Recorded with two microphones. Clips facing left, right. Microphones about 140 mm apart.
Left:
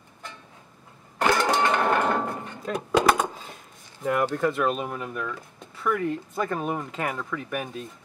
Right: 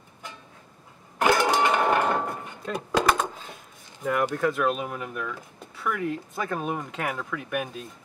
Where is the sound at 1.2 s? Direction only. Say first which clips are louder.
Right 1 dB; 10° right (ahead or behind).